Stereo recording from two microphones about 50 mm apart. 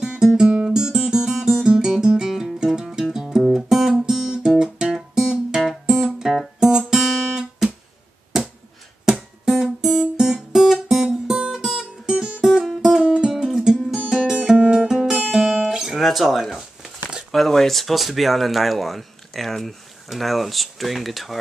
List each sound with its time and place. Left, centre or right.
0.0 s guitar: centre
2.2 s music: centre
6.9 s guitar: centre
9.0 s guitar: centre
11.1 s music: centre
13.3 s music: centre
15.3 s guitar: centre
17.3 s speech: centre